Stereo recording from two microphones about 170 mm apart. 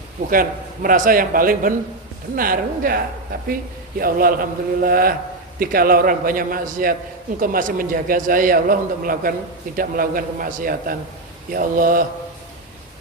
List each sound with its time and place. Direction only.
0.3 s a man's voice: 55° right (ahead or behind)